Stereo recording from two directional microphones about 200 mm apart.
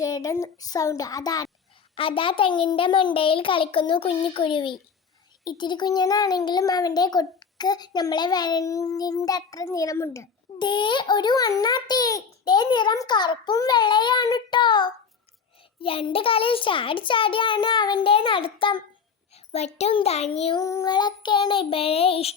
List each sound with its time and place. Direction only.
0.0 s a child's voice: 15° left (ahead or behind)
20.3 s child singing: 30° left (ahead or behind)
20.6 s a child's voice: 15° left (ahead or behind)